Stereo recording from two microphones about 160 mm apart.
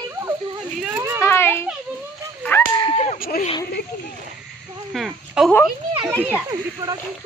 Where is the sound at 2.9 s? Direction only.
45° left (ahead or behind).